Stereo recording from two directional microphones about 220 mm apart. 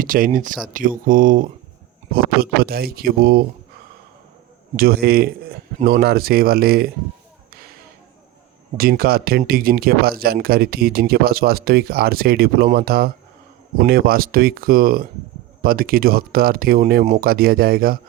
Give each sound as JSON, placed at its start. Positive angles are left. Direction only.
{"t": 0.0, "sound": "speech", "side_deg": -40}
{"t": 4.8, "sound": "speech", "side_deg": -45}
{"t": 8.8, "sound": "speech", "side_deg": -45}